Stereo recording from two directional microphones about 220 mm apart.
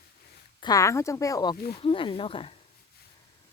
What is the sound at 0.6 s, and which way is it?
Speech, 15° left (ahead or behind).